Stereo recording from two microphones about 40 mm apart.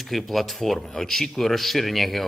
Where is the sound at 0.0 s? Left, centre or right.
Centre.